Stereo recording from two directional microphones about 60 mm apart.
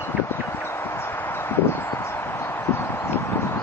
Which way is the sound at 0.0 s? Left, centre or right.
Left.